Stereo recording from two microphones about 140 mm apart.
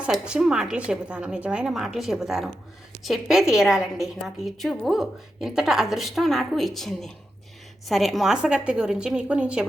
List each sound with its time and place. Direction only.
0.0 s a woman's voice: 5° right (ahead or behind)